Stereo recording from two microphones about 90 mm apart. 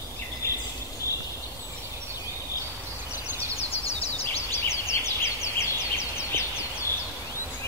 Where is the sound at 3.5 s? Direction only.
90° left.